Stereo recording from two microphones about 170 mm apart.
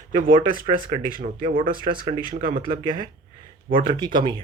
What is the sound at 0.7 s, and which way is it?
Speech, 55° right (ahead or behind).